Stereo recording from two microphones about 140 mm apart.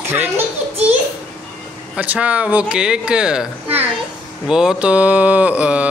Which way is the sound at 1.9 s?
10° right (ahead or behind).